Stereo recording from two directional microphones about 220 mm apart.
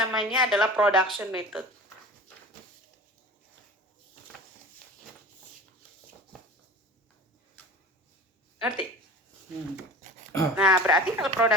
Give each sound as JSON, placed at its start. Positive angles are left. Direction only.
{"t": 0.0, "sound": "a woman's voice", "side_deg": 0}
{"t": 8.6, "sound": "a woman's voice", "side_deg": -5}
{"t": 10.0, "sound": "a sound", "side_deg": -35}
{"t": 10.5, "sound": "a woman's voice", "side_deg": -5}